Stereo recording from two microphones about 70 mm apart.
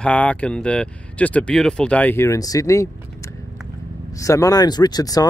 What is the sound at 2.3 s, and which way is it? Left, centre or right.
Speech, left.